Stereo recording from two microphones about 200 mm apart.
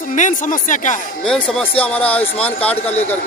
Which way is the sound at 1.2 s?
Centre (ahead or behind).